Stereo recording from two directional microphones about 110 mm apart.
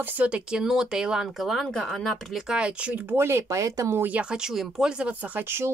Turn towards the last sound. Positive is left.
turn(degrees=-10)  # may be behind; listen again after turning